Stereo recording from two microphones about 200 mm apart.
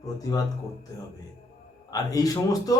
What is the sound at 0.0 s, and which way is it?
Speech, 15° left (ahead or behind).